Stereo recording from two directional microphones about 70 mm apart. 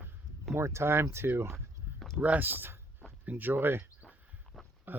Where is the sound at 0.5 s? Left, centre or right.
Right.